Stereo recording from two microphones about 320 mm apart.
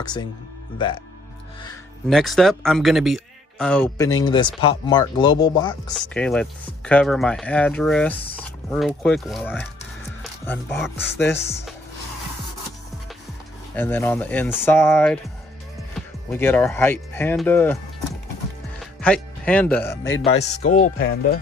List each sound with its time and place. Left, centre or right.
0.0 s speech: centre
2.0 s speech: centre
13.7 s speech: centre
16.3 s speech: centre
18.8 s speech: centre
20.3 s speech: left